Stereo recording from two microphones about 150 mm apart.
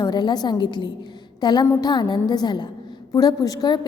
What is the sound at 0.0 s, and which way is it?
A woman's voice, 30° left (ahead or behind).